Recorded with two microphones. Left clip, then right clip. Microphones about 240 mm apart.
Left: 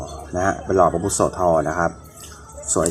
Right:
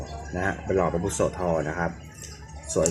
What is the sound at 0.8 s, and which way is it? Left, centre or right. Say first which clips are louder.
Speech: left 11 dB; centre.